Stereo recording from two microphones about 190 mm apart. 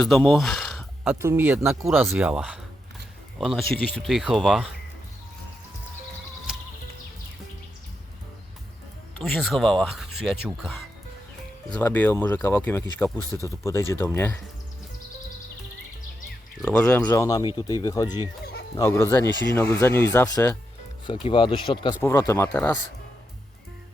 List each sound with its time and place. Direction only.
0.0 s speech: centre (ahead or behind)
1.2 s speech: 10° right (ahead or behind)
6.5 s music: 5° right (ahead or behind)
9.2 s speech: centre (ahead or behind)
16.6 s speech: 5° left (ahead or behind)
21.2 s speech: 25° left (ahead or behind)
22.0 s speech: 15° left (ahead or behind)